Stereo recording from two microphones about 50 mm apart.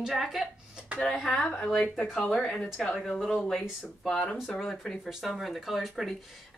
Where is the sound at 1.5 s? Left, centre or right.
Left.